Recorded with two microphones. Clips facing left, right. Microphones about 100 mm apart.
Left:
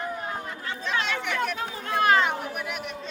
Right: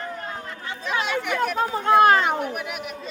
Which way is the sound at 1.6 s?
40° right (ahead or behind).